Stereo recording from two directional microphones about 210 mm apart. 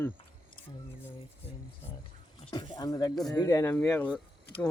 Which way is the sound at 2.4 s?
25° left (ahead or behind).